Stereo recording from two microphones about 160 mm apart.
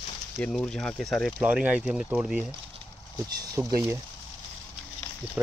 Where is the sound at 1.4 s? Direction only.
10° right (ahead or behind).